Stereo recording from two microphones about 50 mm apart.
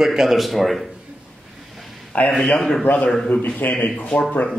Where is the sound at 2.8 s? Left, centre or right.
Left.